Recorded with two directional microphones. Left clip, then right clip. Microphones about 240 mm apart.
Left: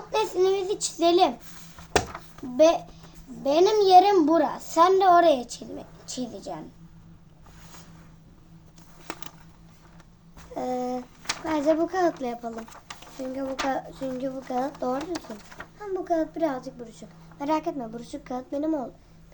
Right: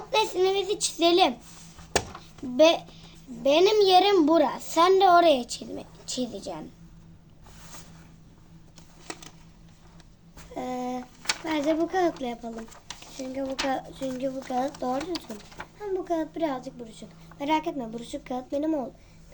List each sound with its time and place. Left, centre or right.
0.1 s a child's voice: right
2.6 s a woman's voice: right
10.5 s a child's voice: centre